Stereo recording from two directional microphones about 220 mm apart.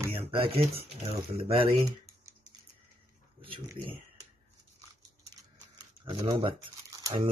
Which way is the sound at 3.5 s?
25° right (ahead or behind).